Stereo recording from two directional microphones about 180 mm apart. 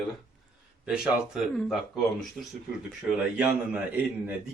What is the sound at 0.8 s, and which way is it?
Speech, 5° right (ahead or behind).